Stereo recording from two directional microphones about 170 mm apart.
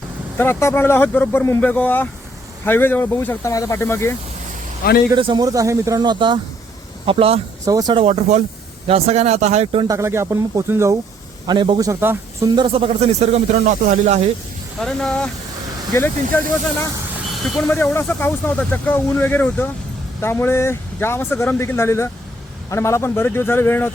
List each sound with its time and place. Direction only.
0.3 s speech: 15° left (ahead or behind)
5.1 s speech: 25° right (ahead or behind)
7.6 s speech: 20° right (ahead or behind)
7.9 s speech: 40° right (ahead or behind)
9.8 s speech: 20° right (ahead or behind)
11.4 s speech: 25° right (ahead or behind)
12.5 s speech: 30° right (ahead or behind)
14.8 s speech: 5° left (ahead or behind)
16.3 s speech: 15° left (ahead or behind)
17.7 s speech: 15° left (ahead or behind)